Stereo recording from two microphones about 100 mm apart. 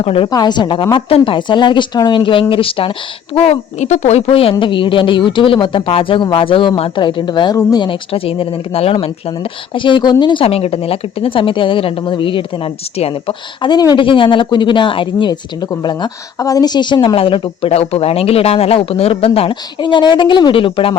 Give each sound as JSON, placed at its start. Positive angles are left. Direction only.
{"t": 0.0, "sound": "speech", "side_deg": 75}
{"t": 0.3, "sound": "a woman's voice", "side_deg": 45}
{"t": 3.3, "sound": "speech", "side_deg": 90}
{"t": 4.6, "sound": "a woman's voice", "side_deg": 55}
{"t": 7.9, "sound": "a woman's voice", "side_deg": 65}
{"t": 10.4, "sound": "a woman's voice", "side_deg": 80}
{"t": 14.0, "sound": "speech", "side_deg": 55}
{"t": 17.2, "sound": "speech", "side_deg": 60}